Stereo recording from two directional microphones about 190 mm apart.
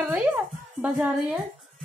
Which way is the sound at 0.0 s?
5° right (ahead or behind).